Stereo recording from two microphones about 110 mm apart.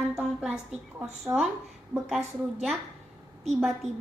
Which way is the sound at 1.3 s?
30° right (ahead or behind).